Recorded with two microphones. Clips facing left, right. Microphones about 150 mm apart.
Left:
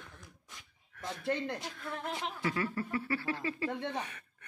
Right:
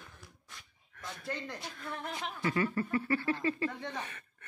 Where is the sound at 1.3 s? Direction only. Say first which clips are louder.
Left 6 dB; 60° left (ahead or behind).